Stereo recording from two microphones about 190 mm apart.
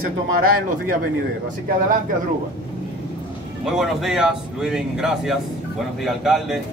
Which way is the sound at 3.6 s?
Centre (ahead or behind).